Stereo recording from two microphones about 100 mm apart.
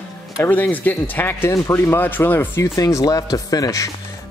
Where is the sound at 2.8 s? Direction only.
35° left (ahead or behind).